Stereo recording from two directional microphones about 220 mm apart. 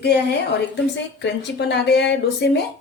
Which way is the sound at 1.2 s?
50° left (ahead or behind).